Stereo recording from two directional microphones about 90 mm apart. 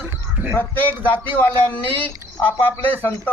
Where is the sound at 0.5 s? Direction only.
20° left (ahead or behind).